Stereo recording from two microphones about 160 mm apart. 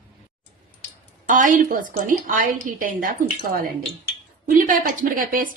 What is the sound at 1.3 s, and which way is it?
A woman's voice, 55° right (ahead or behind).